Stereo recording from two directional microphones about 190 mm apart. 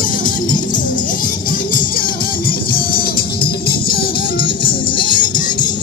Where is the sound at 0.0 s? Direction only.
45° left (ahead or behind).